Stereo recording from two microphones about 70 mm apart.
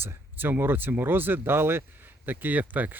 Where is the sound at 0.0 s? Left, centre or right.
Right.